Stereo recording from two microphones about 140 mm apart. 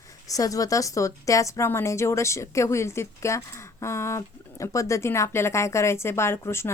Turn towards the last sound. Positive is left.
turn(degrees=20)  # may be behind; listen again after turning